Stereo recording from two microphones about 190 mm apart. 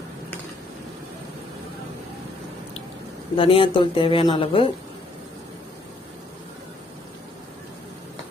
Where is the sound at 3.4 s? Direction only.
30° left (ahead or behind).